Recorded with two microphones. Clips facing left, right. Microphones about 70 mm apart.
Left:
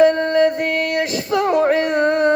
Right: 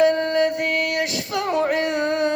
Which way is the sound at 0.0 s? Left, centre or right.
Left.